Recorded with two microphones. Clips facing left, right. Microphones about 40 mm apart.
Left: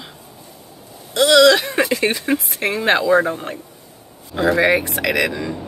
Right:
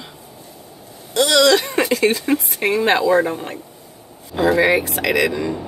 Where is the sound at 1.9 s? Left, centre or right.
Centre.